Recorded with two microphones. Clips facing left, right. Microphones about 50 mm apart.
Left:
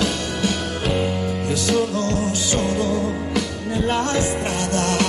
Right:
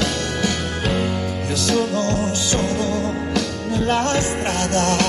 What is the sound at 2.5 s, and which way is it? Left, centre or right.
Music, centre.